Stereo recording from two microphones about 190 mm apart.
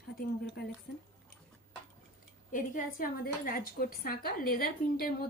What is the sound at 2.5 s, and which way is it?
Speech, 45° left (ahead or behind).